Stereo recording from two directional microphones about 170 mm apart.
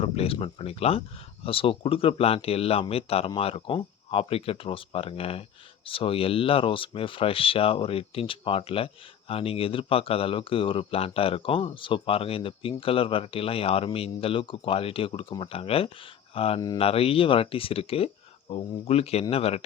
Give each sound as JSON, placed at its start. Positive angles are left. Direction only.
{"t": 0.0, "sound": "speech", "side_deg": 35}